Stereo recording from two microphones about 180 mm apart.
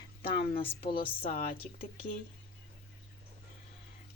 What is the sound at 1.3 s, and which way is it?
Speech, 50° left (ahead or behind).